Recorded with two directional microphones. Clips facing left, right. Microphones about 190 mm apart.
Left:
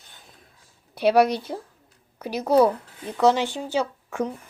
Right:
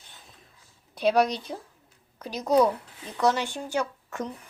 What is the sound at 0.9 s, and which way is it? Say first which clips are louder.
A woman's voice: left 4 dB; 5° left (ahead or behind).